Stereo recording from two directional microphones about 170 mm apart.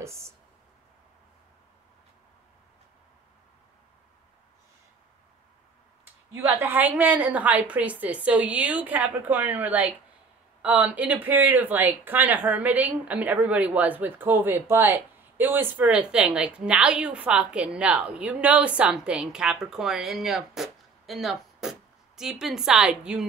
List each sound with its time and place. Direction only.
0.0 s speech: 15° right (ahead or behind)
6.3 s speech: 10° right (ahead or behind)